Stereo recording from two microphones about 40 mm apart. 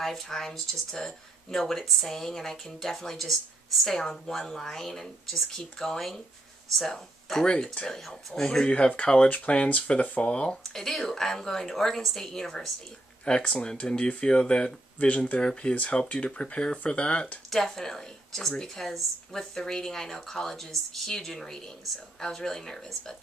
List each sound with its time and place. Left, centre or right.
0.0 s speech: centre
6.9 s speech: centre
7.4 s speech: left
7.9 s speech: centre
8.6 s speech: left
10.6 s speech: centre
13.2 s speech: left
15.0 s speech: left
17.5 s speech: centre